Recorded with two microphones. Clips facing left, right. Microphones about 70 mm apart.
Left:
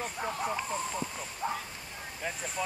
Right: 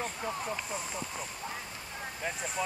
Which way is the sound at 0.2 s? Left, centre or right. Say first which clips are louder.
Left 3 dB; centre.